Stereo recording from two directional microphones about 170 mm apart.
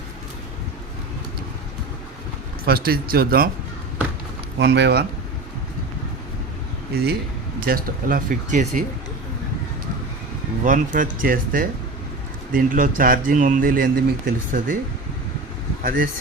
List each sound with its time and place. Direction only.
2.6 s speech: 60° right (ahead or behind)
4.6 s speech: 80° right
6.9 s speech: 70° right (ahead or behind)
7.6 s speech: 55° right (ahead or behind)
10.6 s speech: 50° right (ahead or behind)
15.8 s speech: 55° right (ahead or behind)